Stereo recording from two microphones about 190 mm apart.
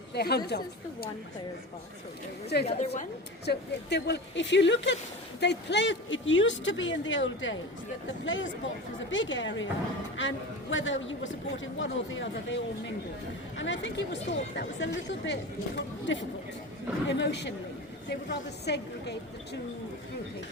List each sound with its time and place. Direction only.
0.1 s a woman's voice: 60° left (ahead or behind)
2.6 s a woman's voice: 35° left (ahead or behind)
3.4 s a man's voice: 60° left (ahead or behind)
13.6 s a woman's voice: 75° left (ahead or behind)